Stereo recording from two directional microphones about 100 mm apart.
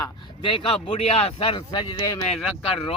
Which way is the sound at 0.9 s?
90° left.